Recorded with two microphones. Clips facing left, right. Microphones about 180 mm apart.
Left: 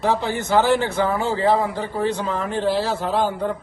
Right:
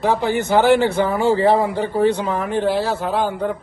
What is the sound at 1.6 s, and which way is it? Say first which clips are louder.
Speech: right 4 dB; 60° right (ahead or behind).